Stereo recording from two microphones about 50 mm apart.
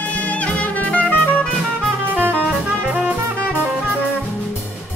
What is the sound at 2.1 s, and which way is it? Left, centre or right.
Music, right.